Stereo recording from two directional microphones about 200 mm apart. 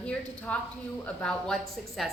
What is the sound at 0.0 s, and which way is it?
A woman's voice, 5° left (ahead or behind).